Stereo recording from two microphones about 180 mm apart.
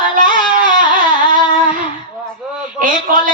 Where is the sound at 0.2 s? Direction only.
50° right (ahead or behind).